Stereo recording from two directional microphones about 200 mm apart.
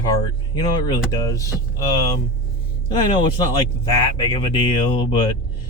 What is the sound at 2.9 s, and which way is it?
Speech, 25° left (ahead or behind).